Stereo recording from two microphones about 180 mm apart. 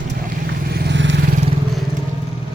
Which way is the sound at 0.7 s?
70° right (ahead or behind).